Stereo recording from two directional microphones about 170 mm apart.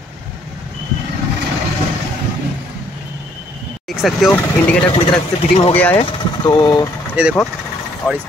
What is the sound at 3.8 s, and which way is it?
Vehicle, centre (ahead or behind).